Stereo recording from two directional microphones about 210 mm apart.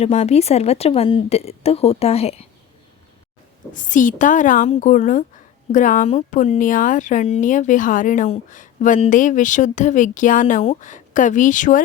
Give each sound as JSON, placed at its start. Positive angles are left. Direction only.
{"t": 0.0, "sound": "a woman's voice", "side_deg": 30}
{"t": 3.7, "sound": "speech", "side_deg": 40}